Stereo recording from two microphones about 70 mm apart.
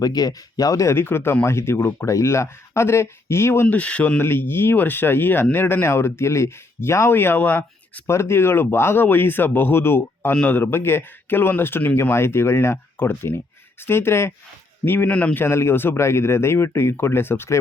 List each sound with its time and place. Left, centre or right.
0.0 s speech: left
0.9 s speech: left
3.7 s speech: centre
4.2 s speech: left
8.0 s speech: left
12.1 s speech: left
15.1 s a man's voice: centre
15.4 s speech: left